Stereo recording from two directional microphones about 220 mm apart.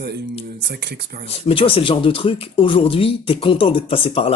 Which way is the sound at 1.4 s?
25° left (ahead or behind).